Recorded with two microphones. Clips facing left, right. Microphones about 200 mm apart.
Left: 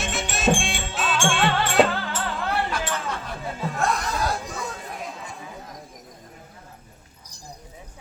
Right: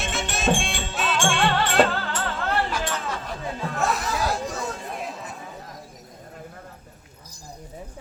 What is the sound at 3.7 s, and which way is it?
Music, 5° right (ahead or behind).